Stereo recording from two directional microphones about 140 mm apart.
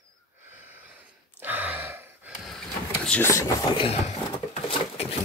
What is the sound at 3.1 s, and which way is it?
Speech, 15° left (ahead or behind).